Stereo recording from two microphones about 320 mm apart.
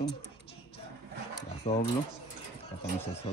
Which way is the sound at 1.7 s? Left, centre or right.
Left.